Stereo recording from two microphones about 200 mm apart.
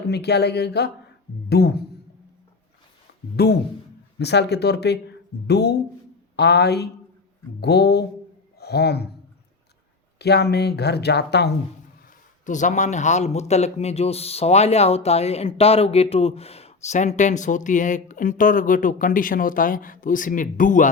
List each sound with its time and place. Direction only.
0.1 s speech: 55° left (ahead or behind)
3.3 s speech: 50° left (ahead or behind)
10.2 s speech: 55° left (ahead or behind)
12.5 s speech: 40° left (ahead or behind)